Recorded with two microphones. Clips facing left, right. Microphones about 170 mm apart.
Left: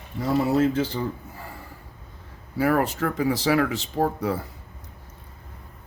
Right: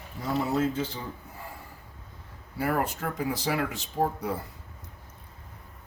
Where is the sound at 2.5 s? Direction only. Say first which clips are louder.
Left 6 dB; 90° left.